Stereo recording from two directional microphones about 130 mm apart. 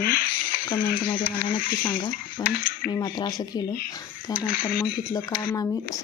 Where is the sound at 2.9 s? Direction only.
35° left (ahead or behind).